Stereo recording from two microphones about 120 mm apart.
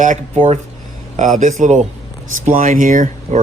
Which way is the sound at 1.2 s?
90° right.